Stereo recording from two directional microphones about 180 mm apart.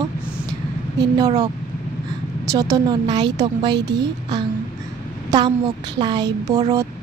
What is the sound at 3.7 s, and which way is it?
Speech, 70° right (ahead or behind).